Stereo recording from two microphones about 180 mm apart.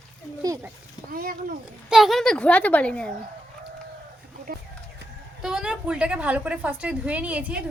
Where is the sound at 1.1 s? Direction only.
55° right (ahead or behind).